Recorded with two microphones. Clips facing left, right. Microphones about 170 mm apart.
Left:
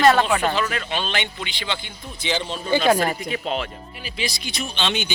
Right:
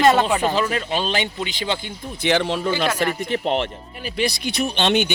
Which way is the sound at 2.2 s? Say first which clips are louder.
Right 7 dB; 65° right (ahead or behind).